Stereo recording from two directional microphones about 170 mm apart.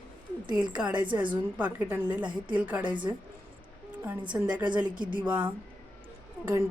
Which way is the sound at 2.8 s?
25° right (ahead or behind).